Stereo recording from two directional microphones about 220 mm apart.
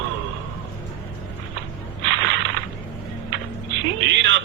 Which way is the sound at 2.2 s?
55° right (ahead or behind).